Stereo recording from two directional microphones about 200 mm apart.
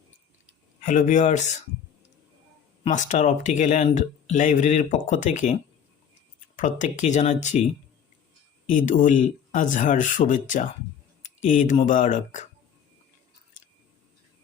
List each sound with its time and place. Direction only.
0.8 s speech: 40° left (ahead or behind)
2.8 s speech: 35° left (ahead or behind)
6.6 s speech: 40° left (ahead or behind)